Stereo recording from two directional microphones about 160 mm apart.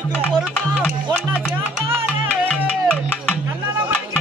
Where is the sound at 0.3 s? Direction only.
5° left (ahead or behind).